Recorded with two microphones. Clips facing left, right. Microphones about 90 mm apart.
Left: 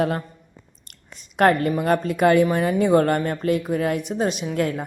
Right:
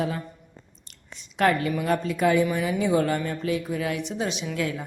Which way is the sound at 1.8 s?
50° left (ahead or behind).